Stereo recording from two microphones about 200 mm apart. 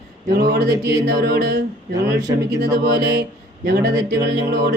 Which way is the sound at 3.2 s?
55° right (ahead or behind).